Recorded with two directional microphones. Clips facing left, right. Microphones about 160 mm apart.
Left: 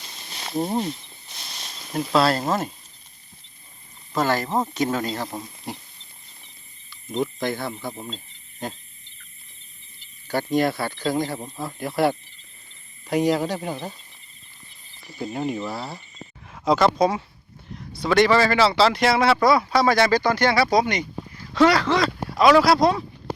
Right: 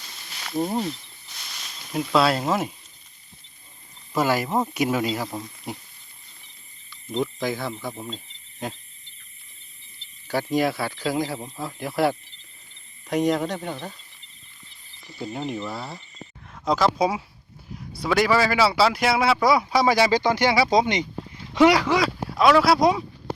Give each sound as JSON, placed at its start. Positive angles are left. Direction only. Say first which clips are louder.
{"t": 0.3, "sound": "snake", "louder": "left 1 dB", "side_deg": 30}
{"t": 1.9, "sound": "speech", "louder": "left 1 dB", "side_deg": 0}
{"t": 4.1, "sound": "speech", "louder": "even", "side_deg": -10}
{"t": 6.9, "sound": "speech", "louder": "left 1 dB", "side_deg": 0}
{"t": 10.2, "sound": "speech", "louder": "left 1 dB", "side_deg": 0}
{"t": 15.0, "sound": "speech", "louder": "left 3 dB", "side_deg": 5}